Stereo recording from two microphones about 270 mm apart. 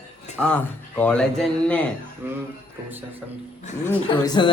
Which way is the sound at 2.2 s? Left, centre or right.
Centre.